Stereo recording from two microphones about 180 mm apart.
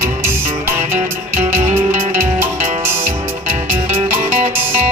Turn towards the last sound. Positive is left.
turn(degrees=-35)  # may be behind; listen again after turning